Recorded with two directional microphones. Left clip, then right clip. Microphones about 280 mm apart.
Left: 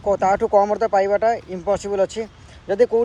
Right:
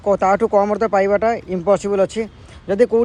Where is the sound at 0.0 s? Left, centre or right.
Right.